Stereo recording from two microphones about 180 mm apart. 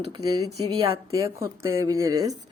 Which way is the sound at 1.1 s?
15° right (ahead or behind).